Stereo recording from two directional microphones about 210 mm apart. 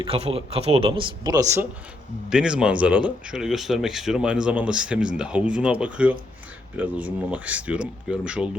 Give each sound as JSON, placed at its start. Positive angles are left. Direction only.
{"t": 0.0, "sound": "a man's voice", "side_deg": -25}
{"t": 2.3, "sound": "speech", "side_deg": -5}